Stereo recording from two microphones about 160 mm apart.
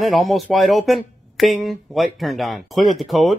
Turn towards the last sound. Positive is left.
turn(degrees=0)  # may be behind; listen again after turning